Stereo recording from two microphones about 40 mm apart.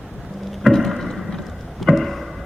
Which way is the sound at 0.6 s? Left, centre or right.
Centre.